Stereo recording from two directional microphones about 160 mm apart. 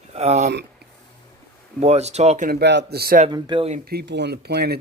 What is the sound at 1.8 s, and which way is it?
Speech, 45° right (ahead or behind).